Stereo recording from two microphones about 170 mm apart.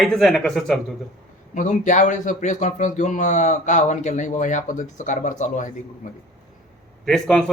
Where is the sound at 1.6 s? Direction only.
45° left (ahead or behind).